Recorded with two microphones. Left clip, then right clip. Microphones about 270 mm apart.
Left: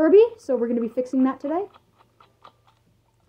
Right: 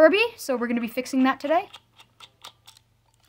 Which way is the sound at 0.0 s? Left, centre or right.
Right.